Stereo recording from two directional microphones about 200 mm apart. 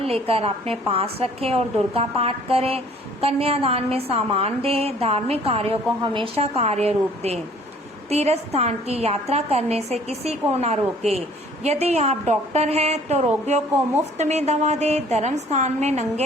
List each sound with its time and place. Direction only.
0.0 s a woman's voice: 30° right (ahead or behind)